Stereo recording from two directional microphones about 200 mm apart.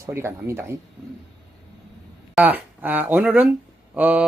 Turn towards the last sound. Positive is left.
turn(degrees=-10)  # may be behind; listen again after turning